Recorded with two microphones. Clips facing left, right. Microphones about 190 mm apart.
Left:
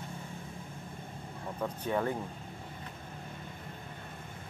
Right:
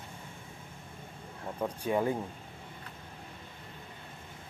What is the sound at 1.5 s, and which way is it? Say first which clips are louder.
Speech: right 2 dB; 15° right (ahead or behind).